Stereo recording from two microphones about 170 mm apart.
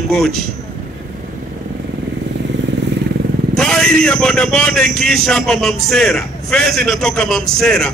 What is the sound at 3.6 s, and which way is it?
A man's voice, 5° left (ahead or behind).